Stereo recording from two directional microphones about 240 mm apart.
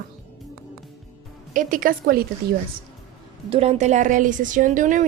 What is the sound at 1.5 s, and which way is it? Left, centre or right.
Speech, right.